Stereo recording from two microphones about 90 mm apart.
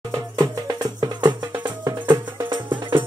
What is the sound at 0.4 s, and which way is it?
Music, 45° right (ahead or behind).